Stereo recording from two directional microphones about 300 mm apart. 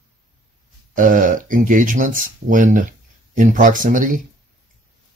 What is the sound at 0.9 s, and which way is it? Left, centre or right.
Speech, right.